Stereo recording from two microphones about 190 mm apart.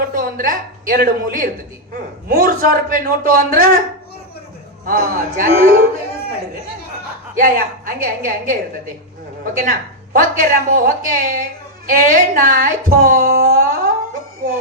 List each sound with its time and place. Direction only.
0.2 s a woman's voice: 45° right (ahead or behind)
4.9 s a woman's voice: 50° right (ahead or behind)
7.3 s a woman's voice: 45° right (ahead or behind)